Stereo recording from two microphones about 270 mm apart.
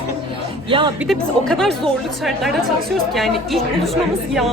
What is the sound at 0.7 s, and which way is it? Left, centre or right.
Speech, centre.